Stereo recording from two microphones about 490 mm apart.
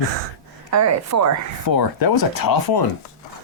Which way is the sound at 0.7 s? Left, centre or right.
Right.